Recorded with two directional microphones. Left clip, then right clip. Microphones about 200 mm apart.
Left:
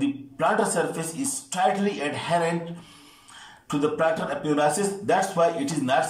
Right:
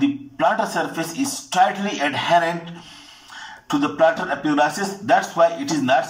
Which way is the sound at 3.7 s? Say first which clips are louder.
Right 6 dB; 45° right (ahead or behind).